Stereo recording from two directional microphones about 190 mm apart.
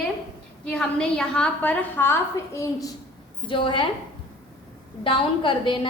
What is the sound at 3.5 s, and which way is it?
Speech, 25° left (ahead or behind).